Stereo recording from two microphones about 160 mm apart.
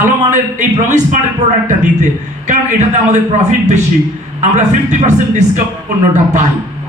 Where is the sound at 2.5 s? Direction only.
45° right (ahead or behind).